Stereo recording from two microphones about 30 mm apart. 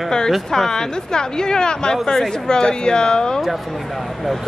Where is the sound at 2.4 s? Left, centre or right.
Left.